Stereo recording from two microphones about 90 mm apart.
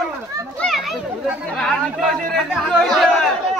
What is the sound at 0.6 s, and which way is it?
Children playing, 10° left (ahead or behind).